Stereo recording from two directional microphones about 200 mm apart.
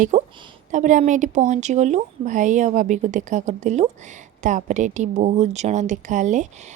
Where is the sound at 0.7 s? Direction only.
40° right (ahead or behind).